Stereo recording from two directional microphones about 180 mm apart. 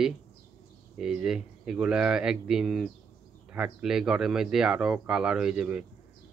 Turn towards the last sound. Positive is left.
turn(degrees=-5)  # may be behind; listen again after turning